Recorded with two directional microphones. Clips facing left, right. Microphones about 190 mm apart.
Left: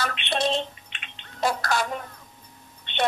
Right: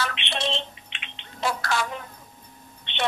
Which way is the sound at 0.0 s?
45° left (ahead or behind).